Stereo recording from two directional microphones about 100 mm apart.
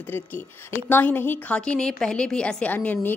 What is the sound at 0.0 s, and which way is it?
A woman's voice, 20° left (ahead or behind).